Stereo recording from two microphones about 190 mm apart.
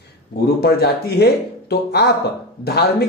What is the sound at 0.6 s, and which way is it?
Speech, 55° left (ahead or behind).